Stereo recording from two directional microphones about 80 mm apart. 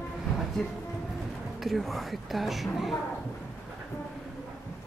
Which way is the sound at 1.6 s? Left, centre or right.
Centre.